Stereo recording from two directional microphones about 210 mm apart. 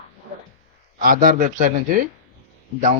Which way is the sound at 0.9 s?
40° right (ahead or behind).